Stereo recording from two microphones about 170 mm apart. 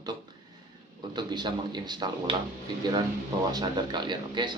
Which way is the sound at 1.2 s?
25° right (ahead or behind).